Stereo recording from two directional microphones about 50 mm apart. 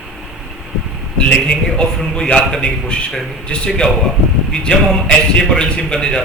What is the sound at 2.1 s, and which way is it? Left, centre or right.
A man's voice, centre.